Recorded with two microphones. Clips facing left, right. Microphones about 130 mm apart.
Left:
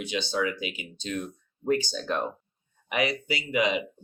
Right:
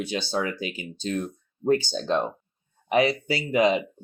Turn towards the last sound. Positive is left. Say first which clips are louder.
# right 5 dB
turn(degrees=-35)  # may be behind; listen again after turning